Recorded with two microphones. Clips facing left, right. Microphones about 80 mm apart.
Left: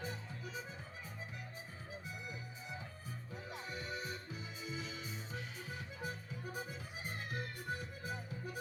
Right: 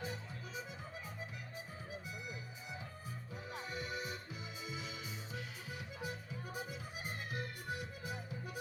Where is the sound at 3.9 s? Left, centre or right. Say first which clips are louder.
Even; left.